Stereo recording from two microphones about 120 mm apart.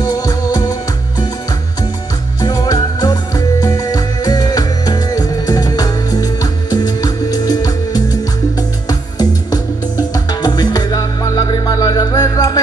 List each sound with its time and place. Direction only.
0.0 s music: 35° left (ahead or behind)
2.4 s music: 35° left (ahead or behind)